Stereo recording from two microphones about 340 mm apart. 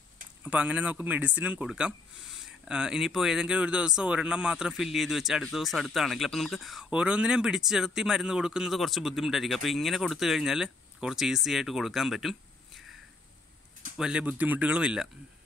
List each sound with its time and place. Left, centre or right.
0.4 s speech: centre
13.9 s speech: centre